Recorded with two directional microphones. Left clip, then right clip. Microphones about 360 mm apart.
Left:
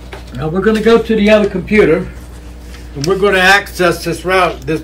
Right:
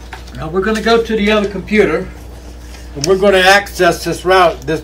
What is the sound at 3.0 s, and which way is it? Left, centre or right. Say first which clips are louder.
Speech: right 1 dB; centre.